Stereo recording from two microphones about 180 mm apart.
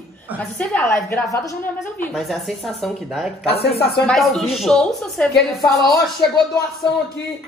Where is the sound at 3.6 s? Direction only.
65° left (ahead or behind).